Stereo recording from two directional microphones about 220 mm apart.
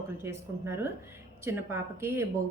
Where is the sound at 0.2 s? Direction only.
10° right (ahead or behind).